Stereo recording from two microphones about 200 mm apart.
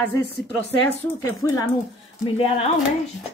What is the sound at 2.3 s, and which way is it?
Speech, 30° left (ahead or behind).